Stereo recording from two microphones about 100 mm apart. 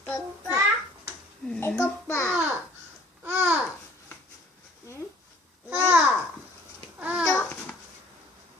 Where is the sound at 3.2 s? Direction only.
20° right (ahead or behind).